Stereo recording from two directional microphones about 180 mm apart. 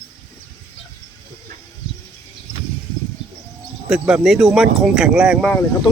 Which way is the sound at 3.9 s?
5° right (ahead or behind).